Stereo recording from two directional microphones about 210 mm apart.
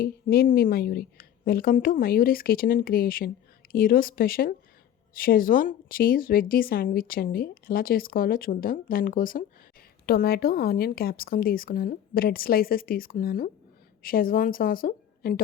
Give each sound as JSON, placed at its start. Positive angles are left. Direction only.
{"t": 0.0, "sound": "a woman's voice", "side_deg": 45}